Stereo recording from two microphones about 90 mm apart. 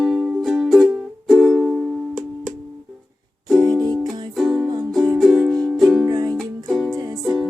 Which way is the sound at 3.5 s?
50° right (ahead or behind).